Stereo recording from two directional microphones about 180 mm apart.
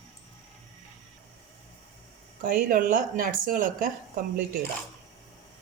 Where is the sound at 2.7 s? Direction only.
50° right (ahead or behind).